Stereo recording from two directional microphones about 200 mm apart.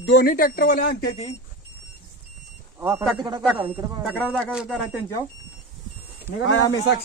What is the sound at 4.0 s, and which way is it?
Speech, centre (ahead or behind).